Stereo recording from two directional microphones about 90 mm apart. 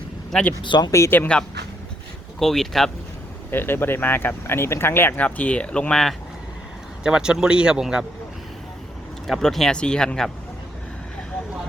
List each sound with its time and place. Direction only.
0.3 s speech: 10° left (ahead or behind)
0.6 s speech: 60° left (ahead or behind)
0.9 s speech: 35° left (ahead or behind)
2.4 s speech: 5° left (ahead or behind)
3.5 s speech: 25° left (ahead or behind); by 6.1 s 5° left (ahead or behind)
7.0 s speech: 10° right (ahead or behind)
9.2 s speech: 5° left (ahead or behind)